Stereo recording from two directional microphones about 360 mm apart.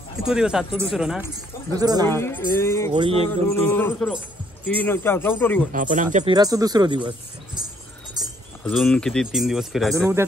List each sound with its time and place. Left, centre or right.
0.3 s speech: centre
2.0 s speech: centre
2.9 s speech: centre
3.3 s speech: centre
5.7 s speech: right
8.2 s keys jangling: centre
8.6 s speech: centre